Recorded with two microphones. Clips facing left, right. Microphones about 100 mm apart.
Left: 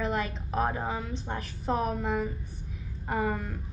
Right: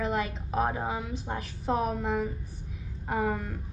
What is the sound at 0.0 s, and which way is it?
A woman's voice, centre (ahead or behind).